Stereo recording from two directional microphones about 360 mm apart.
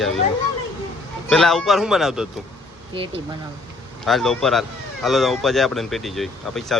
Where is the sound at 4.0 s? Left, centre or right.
Centre.